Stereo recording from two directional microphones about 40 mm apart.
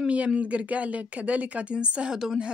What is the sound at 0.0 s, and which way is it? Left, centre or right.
A woman's voice, right.